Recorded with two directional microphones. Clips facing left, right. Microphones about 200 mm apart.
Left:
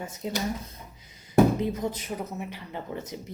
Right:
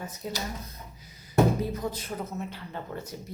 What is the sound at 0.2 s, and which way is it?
Speech, 20° left (ahead or behind).